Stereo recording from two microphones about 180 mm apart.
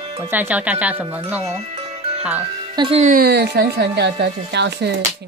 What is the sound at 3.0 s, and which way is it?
Speech, 50° right (ahead or behind).